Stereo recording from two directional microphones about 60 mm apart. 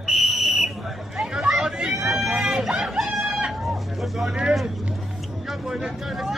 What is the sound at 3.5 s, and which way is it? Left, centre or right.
Hubbub, centre.